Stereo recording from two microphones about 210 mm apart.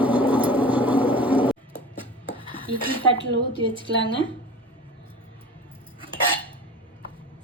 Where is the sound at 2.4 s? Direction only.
25° right (ahead or behind).